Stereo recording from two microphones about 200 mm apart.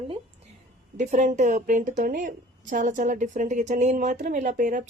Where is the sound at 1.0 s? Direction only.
40° right (ahead or behind).